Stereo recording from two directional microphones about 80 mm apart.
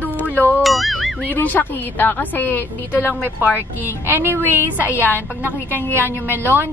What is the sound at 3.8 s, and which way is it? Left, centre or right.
A woman's voice, right.